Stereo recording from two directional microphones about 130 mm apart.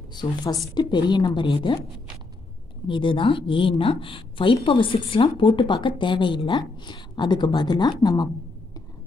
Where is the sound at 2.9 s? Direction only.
40° left (ahead or behind).